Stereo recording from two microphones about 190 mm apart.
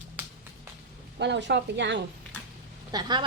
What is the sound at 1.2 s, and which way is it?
Speech, 65° right (ahead or behind).